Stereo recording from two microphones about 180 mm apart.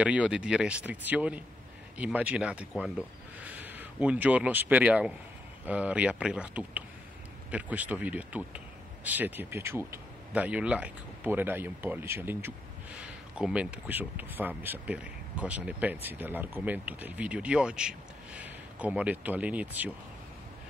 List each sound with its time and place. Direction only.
0.0 s speech: 5° right (ahead or behind)